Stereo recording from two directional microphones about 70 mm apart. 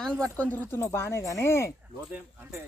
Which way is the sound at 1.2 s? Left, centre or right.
Left.